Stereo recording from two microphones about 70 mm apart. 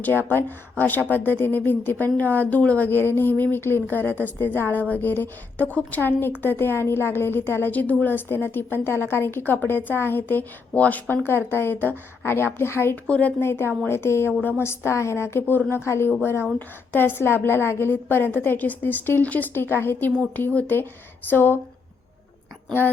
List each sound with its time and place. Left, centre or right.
0.0 s a woman's voice: left
11.1 s a woman's voice: left
13.1 s speech: centre
13.4 s a woman's voice: left